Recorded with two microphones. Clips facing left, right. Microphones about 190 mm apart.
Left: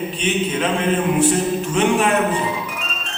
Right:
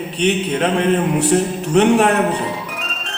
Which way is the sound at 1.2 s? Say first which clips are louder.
Right 1 dB; 65° right (ahead or behind).